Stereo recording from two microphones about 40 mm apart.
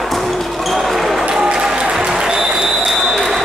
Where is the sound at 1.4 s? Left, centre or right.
Centre.